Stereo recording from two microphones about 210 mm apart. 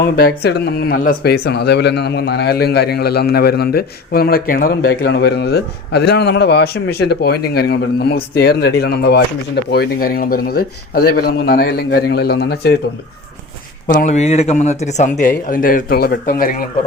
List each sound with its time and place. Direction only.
0.0 s speech: 45° left (ahead or behind)
13.9 s speech: 35° left (ahead or behind)